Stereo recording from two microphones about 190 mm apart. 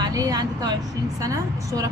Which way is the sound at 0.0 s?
20° right (ahead or behind).